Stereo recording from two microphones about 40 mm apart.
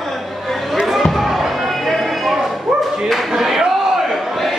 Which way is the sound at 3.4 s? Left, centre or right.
Centre.